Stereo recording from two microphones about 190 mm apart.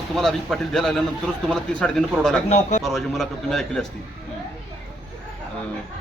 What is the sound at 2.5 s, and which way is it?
Speech, 40° left (ahead or behind).